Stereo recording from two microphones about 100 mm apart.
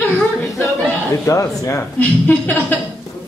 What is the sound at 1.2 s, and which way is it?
Speech, 35° left (ahead or behind).